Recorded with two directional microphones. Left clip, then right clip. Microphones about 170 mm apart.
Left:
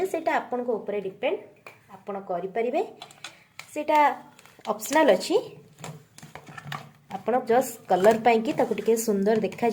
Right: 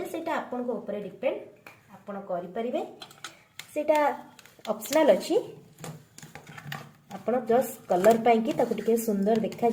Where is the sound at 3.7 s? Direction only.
20° left (ahead or behind).